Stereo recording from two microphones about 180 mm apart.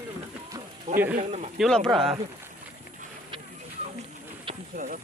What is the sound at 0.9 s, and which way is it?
Speech, 40° right (ahead or behind).